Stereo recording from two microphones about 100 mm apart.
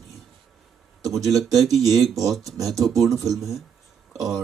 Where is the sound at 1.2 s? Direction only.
Centre (ahead or behind).